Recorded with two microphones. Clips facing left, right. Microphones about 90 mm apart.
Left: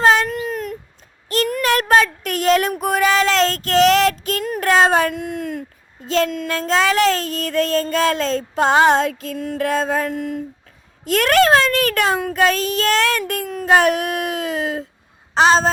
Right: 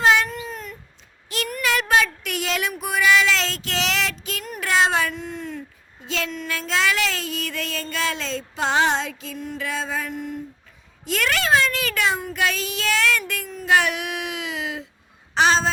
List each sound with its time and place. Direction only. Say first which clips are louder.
0.0 s a sound: left 3 dB; 40° left (ahead or behind)
0.5 s a sound: left 9 dB; 70° left (ahead or behind)
1.6 s child singing: left 4 dB; 45° left (ahead or behind)
4.6 s a sound: left 5 dB; 50° left (ahead or behind)
5.2 s speech: left 6 dB; 70° left (ahead or behind)
6.1 s child singing: left 9 dB; 40° left (ahead or behind)
10.1 s speech: left 6 dB; 90° left
11.0 s child singing: left 9 dB; 50° left (ahead or behind)
15.4 s speech: left 5 dB; 40° left (ahead or behind)